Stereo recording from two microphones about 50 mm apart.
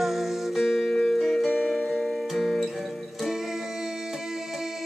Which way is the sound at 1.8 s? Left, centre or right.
Centre.